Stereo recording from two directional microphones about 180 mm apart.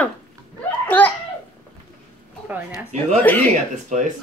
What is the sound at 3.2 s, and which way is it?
Speech, 10° left (ahead or behind).